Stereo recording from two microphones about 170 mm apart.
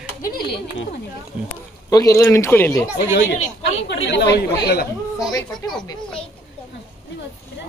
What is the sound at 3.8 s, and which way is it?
Speech, 85° left.